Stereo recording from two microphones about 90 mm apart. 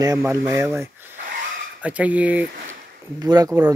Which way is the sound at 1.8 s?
15° right (ahead or behind).